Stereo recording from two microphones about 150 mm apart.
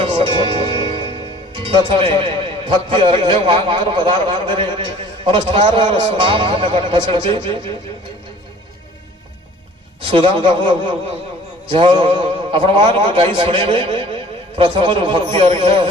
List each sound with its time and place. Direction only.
0.0 s music: 35° right (ahead or behind)
1.5 s a man's voice: 35° right (ahead or behind)
10.0 s a man's voice: 35° right (ahead or behind)